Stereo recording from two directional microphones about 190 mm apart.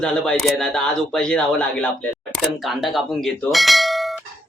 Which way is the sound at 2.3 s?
Centre (ahead or behind).